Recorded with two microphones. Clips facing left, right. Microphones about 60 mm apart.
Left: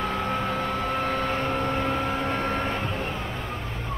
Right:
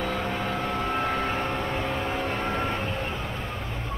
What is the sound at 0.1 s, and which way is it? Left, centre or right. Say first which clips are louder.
Vehicle: left 2 dB; left.